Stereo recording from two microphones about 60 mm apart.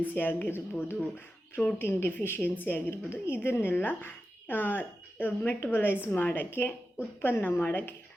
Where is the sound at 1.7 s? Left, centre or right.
Left.